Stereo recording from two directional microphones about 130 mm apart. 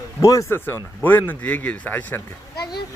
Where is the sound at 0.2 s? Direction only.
25° left (ahead or behind).